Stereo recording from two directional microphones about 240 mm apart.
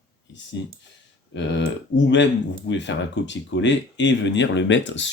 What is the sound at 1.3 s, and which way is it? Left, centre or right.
Speech, left.